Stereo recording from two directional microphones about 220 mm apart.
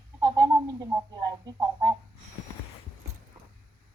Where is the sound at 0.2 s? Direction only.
20° right (ahead or behind).